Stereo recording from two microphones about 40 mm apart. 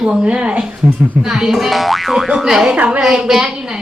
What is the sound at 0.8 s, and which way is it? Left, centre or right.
Speech, centre.